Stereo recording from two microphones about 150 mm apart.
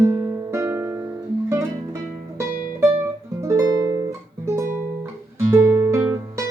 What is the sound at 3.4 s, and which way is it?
Music, 20° right (ahead or behind).